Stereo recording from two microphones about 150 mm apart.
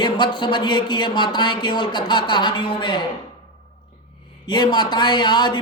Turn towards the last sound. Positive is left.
turn(degrees=30)  # may be behind; listen again after turning